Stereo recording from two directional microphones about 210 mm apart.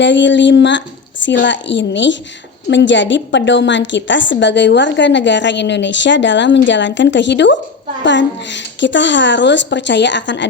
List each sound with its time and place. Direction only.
0.0 s a woman's voice: 60° left (ahead or behind)